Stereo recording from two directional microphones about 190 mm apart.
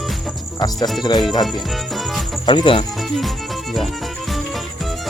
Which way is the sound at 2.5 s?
25° left (ahead or behind).